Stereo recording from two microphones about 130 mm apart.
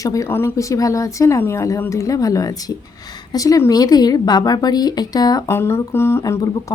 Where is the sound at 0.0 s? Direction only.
25° left (ahead or behind).